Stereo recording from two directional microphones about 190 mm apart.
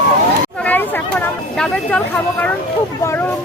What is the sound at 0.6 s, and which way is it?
Chatter, 10° left (ahead or behind).